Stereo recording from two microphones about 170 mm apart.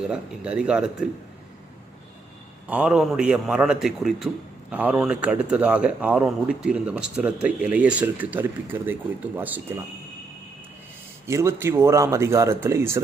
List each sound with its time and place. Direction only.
0.1 s a man's voice: 5° right (ahead or behind)
2.6 s a man's voice: 5° right (ahead or behind)
11.3 s speech: 15° right (ahead or behind)